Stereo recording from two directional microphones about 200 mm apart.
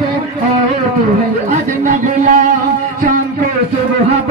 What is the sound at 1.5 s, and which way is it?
Speech, 40° right (ahead or behind).